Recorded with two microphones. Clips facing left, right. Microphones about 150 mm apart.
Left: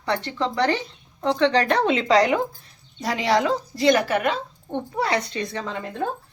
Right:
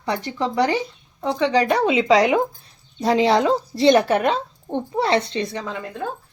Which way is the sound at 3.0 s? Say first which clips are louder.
Right 5 dB; 25° right (ahead or behind).